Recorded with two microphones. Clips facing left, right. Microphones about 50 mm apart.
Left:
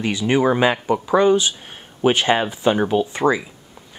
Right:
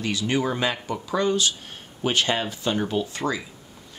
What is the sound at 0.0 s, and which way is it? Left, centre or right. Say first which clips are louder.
Speech: left 6 dB; left.